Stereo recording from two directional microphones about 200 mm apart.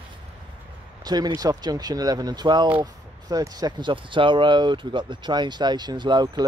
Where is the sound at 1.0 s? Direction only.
20° right (ahead or behind).